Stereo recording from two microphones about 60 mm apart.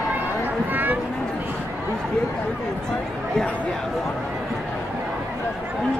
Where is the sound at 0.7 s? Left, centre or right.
Right.